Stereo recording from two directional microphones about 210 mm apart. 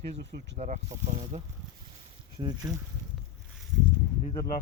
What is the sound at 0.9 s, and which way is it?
Speech, 15° right (ahead or behind).